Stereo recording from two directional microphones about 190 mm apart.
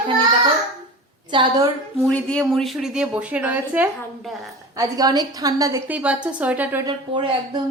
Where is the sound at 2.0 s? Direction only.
5° left (ahead or behind).